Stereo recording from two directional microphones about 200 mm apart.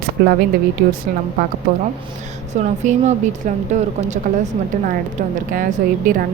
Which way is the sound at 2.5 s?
35° right (ahead or behind).